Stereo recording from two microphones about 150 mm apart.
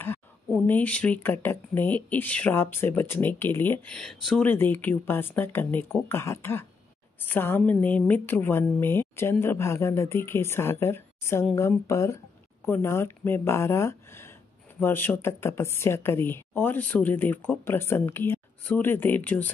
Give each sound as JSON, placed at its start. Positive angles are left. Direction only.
{"t": 0.7, "sound": "speech", "side_deg": 10}
{"t": 4.5, "sound": "speech", "side_deg": 15}